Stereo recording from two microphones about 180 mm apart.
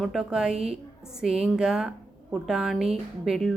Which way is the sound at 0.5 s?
35° right (ahead or behind).